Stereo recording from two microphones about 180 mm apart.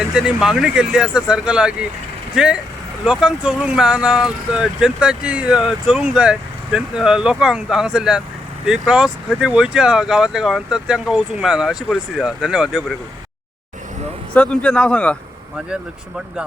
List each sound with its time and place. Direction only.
0.1 s speech: 5° right (ahead or behind)
14.3 s speech: 5° left (ahead or behind)